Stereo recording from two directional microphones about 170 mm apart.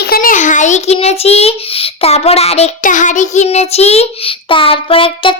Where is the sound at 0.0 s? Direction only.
60° left (ahead or behind).